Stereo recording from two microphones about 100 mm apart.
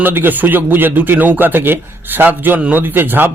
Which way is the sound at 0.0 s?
20° right (ahead or behind).